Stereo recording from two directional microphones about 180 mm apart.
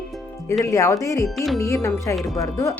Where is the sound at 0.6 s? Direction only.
20° left (ahead or behind).